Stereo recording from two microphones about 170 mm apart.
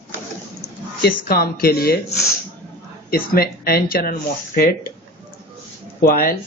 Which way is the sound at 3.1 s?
65° left (ahead or behind).